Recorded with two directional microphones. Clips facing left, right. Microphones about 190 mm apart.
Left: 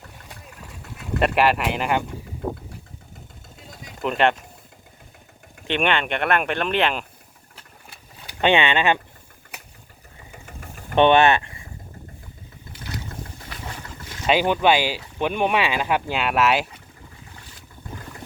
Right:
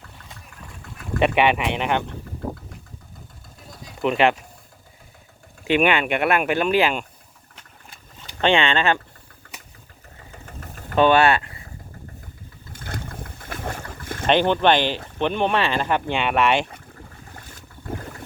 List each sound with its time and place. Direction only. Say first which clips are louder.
1.2 s speech: right 1 dB; centre (ahead or behind)
4.0 s speech: right 2 dB; centre (ahead or behind)
5.6 s speech: right 4 dB; 5° right (ahead or behind)
7.5 s vehicle: left 1 dB; 10° left (ahead or behind)
10.3 s vehicle: right 1 dB; 10° left (ahead or behind)
10.9 s speech: left 1 dB; 25° left (ahead or behind)
12.7 s boat: even; 55° right (ahead or behind)
14.3 s speech: right 1 dB; 10° left (ahead or behind)